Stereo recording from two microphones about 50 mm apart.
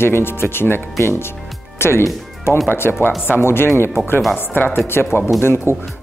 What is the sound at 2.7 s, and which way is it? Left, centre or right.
Speech, left.